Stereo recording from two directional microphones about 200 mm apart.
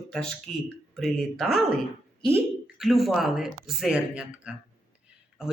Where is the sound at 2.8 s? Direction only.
Centre (ahead or behind).